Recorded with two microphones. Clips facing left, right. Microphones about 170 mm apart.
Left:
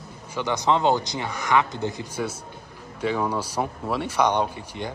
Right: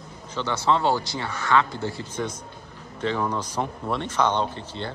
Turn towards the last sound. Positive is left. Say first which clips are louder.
# even
turn(degrees=10)  # may be behind; listen again after turning